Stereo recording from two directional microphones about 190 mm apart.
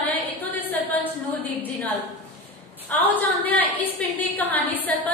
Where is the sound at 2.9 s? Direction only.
10° left (ahead or behind).